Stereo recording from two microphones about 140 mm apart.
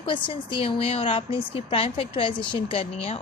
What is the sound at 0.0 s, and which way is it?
Speech, 35° left (ahead or behind).